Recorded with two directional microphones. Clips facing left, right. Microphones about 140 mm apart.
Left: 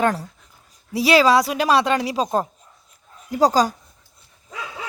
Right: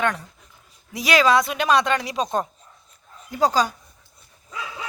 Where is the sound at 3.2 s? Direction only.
35° left (ahead or behind).